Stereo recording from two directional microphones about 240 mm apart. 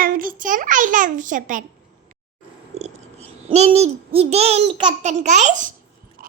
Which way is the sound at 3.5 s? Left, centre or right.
Right.